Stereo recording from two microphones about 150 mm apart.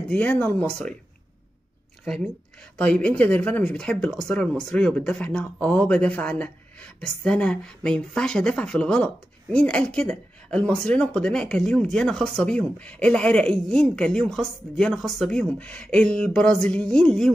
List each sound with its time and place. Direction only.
0.1 s speech: 10° left (ahead or behind)
2.8 s speech: 10° left (ahead or behind)